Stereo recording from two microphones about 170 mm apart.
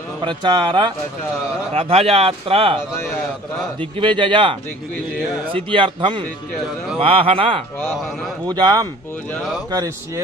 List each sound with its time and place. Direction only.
0.2 s speech: 25° right (ahead or behind)
4.0 s speech: 30° right (ahead or behind)
9.3 s speech: centre (ahead or behind)
9.7 s speech: 20° right (ahead or behind)